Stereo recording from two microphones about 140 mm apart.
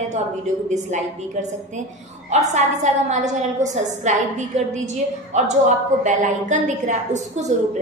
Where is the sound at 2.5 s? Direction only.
55° right (ahead or behind).